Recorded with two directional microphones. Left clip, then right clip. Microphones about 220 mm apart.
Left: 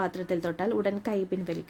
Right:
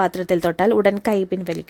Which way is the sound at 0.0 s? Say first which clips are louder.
Right 11 dB; 40° right (ahead or behind).